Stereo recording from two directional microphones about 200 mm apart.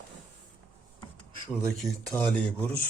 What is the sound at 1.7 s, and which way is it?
Speech, centre (ahead or behind).